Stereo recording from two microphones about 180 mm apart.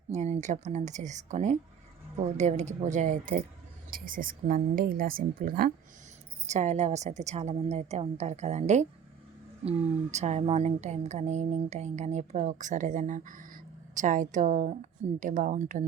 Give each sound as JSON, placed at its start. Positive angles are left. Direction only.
{"t": 0.1, "sound": "a woman's voice", "side_deg": -40}
{"t": 6.5, "sound": "a woman's voice", "side_deg": -40}